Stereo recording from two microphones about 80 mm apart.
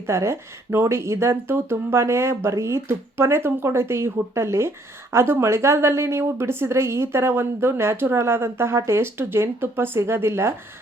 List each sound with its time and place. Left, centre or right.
0.0 s speech: right